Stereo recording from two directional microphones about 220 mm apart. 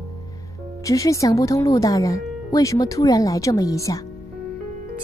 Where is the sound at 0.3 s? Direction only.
15° left (ahead or behind).